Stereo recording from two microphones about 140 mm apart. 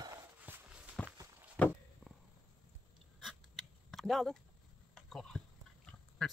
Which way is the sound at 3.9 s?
Centre (ahead or behind).